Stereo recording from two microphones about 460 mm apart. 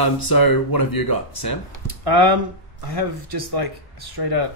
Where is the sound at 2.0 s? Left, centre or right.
Right.